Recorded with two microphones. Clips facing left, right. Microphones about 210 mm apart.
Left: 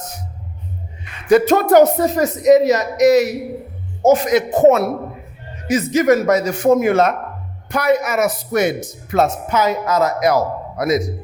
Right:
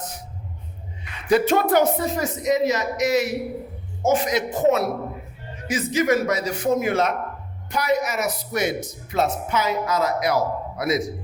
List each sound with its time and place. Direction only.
1.3 s speech: 45° left (ahead or behind)